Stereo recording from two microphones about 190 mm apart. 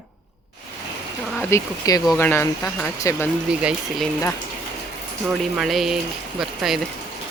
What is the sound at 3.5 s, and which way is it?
Speech, 5° right (ahead or behind).